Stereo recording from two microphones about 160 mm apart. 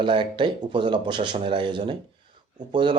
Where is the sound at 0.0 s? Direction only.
30° right (ahead or behind).